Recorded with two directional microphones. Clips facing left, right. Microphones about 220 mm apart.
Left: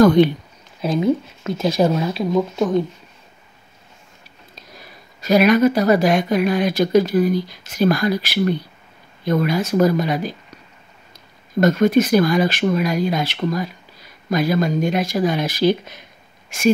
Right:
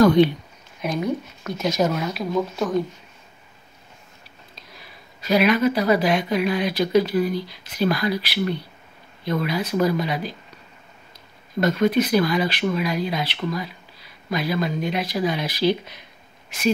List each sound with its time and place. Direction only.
0.0 s speech: 50° left (ahead or behind)
0.7 s speech: 25° left (ahead or behind)
4.7 s speech: 45° left (ahead or behind)
11.6 s speech: 45° left (ahead or behind)